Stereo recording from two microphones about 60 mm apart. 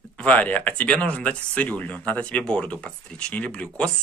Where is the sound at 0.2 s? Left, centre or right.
Left.